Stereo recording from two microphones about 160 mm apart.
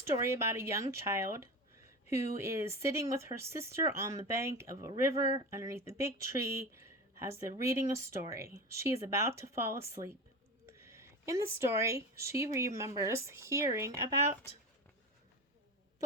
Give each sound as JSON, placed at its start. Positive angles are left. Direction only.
{"t": 0.2, "sound": "speech", "side_deg": -15}